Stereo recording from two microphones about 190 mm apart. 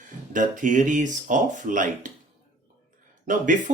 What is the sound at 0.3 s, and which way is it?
Speech, 40° right (ahead or behind).